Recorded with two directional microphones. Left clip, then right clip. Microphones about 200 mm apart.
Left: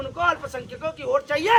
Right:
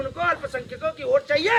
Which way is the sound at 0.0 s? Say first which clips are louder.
Left 1 dB; 20° left (ahead or behind).